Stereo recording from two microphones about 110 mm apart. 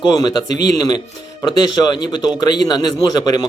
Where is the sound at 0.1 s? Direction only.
40° left (ahead or behind).